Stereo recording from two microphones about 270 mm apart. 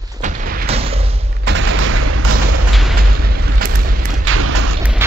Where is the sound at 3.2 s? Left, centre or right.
Right.